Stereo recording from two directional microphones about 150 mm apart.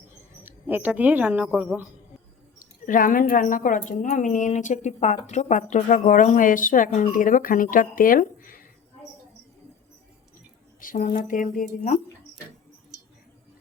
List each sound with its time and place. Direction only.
0.4 s speech: 10° right (ahead or behind)
2.6 s a woman's voice: 65° left (ahead or behind)
10.8 s a sound: 65° left (ahead or behind)
11.3 s a woman's voice: 60° left (ahead or behind)